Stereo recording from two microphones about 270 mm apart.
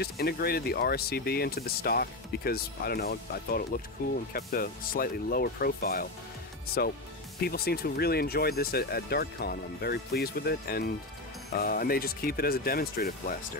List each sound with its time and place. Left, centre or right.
0.0 s speech: left